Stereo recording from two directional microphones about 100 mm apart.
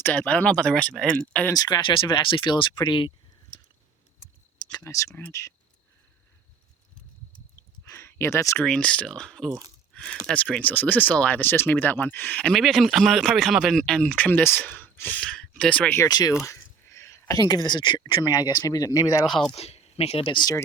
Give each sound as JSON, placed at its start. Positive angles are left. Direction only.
{"t": 0.0, "sound": "speech", "side_deg": 10}
{"t": 1.5, "sound": "speech", "side_deg": 40}
{"t": 4.7, "sound": "speech", "side_deg": 30}
{"t": 7.9, "sound": "a sound", "side_deg": 25}
{"t": 8.6, "sound": "speech", "side_deg": 10}
{"t": 9.9, "sound": "a sound", "side_deg": 10}
{"t": 10.2, "sound": "speech", "side_deg": 10}
{"t": 14.7, "sound": "a sound", "side_deg": 20}
{"t": 15.1, "sound": "speech", "side_deg": 10}
{"t": 16.0, "sound": "speech", "side_deg": 40}
{"t": 16.5, "sound": "a sound", "side_deg": 30}
{"t": 17.3, "sound": "speech", "side_deg": 40}
{"t": 19.5, "sound": "speech", "side_deg": 90}